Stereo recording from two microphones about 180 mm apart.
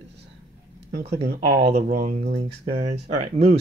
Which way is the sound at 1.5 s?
60° right (ahead or behind).